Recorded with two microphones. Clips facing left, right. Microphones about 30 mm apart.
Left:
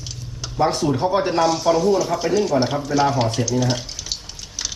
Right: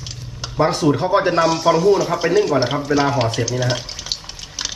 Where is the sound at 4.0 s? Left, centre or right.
Right.